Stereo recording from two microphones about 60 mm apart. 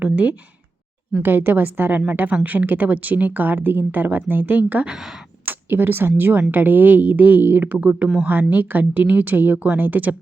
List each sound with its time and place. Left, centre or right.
0.0 s a woman's voice: right
1.2 s a woman's voice: right
4.9 s speech: centre
5.5 s a woman's voice: right